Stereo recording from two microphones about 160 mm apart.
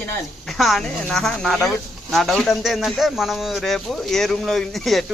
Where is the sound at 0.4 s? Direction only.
Centre (ahead or behind).